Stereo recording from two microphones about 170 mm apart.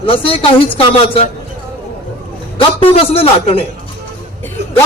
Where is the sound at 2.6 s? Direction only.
35° left (ahead or behind).